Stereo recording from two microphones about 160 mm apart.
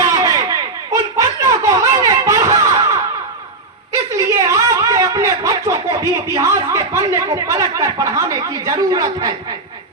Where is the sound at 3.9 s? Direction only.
20° right (ahead or behind).